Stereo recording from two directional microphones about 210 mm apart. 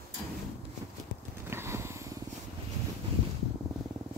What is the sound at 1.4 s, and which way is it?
Vehicle, 10° right (ahead or behind).